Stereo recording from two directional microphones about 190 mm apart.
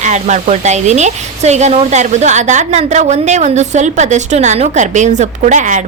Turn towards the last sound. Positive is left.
turn(degrees=-40)  # may be behind; listen again after turning